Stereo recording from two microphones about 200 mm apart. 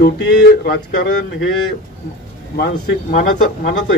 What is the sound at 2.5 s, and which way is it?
Speech, 50° left (ahead or behind).